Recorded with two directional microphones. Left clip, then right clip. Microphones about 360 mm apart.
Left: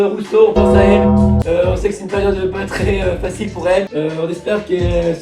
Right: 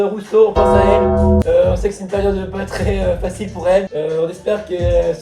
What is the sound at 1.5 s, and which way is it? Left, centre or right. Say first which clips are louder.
Speech: even; right.